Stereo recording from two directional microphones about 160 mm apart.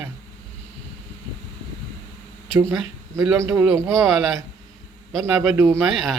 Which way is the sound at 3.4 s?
20° right (ahead or behind).